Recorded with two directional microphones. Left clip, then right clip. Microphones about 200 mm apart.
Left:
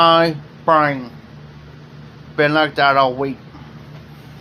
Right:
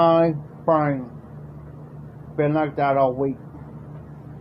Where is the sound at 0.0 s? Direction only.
5° left (ahead or behind).